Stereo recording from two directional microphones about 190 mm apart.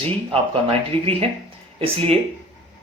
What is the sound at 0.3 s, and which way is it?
Speech, 30° right (ahead or behind).